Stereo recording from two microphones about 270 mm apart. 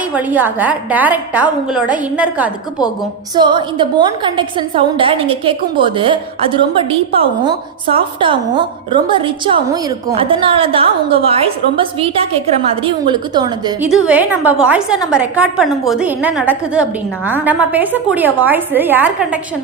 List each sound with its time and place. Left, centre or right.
0.1 s a woman's voice: centre
3.3 s a woman's voice: centre